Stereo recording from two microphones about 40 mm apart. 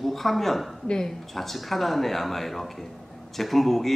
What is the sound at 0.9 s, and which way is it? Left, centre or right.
Speech, centre.